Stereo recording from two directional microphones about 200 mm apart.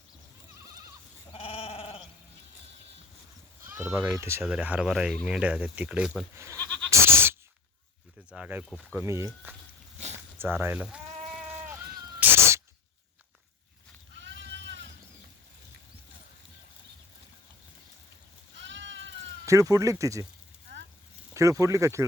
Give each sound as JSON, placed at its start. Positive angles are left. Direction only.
{"t": 1.3, "sound": "goat", "side_deg": 30}
{"t": 3.7, "sound": "speech", "side_deg": -10}
{"t": 6.6, "sound": "goat", "side_deg": 5}
{"t": 6.9, "sound": "goat", "side_deg": -10}
{"t": 8.3, "sound": "a sound", "side_deg": -5}
{"t": 9.0, "sound": "speech", "side_deg": -15}
{"t": 10.3, "sound": "bleat", "side_deg": -10}
{"t": 12.2, "sound": "cat", "side_deg": -10}
{"t": 14.2, "sound": "sheep", "side_deg": -65}
{"t": 18.5, "sound": "goat", "side_deg": -65}
{"t": 19.5, "sound": "speech", "side_deg": -15}
{"t": 21.3, "sound": "speech", "side_deg": -15}